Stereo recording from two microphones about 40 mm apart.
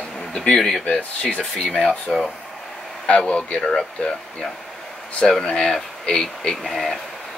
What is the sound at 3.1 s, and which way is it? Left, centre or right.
Speech, left.